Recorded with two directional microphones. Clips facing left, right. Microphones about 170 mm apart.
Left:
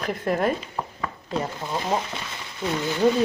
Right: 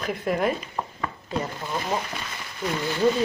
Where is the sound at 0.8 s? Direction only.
Centre (ahead or behind).